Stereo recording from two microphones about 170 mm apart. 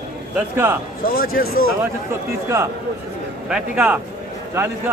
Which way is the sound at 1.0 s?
65° left (ahead or behind).